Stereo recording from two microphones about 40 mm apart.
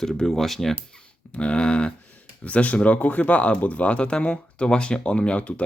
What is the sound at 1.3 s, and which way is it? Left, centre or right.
Speech, left.